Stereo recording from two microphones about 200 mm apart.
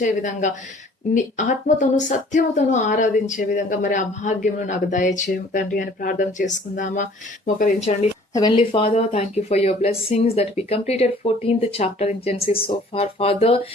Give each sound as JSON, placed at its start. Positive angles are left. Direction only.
{"t": 0.0, "sound": "speech", "side_deg": 40}
{"t": 8.3, "sound": "speech", "side_deg": 20}